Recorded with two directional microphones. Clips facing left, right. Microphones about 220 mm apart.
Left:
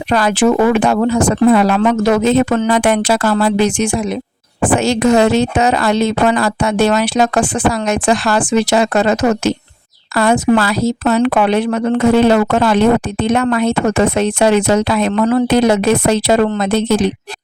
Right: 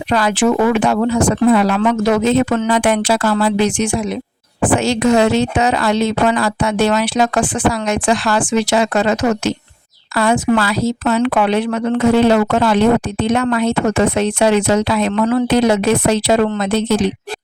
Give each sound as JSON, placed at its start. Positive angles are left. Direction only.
{"t": 0.1, "sound": "a woman's voice", "side_deg": 45}